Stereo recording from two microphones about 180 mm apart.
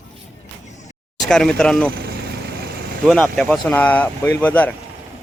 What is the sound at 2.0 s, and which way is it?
Vehicle, 60° right (ahead or behind).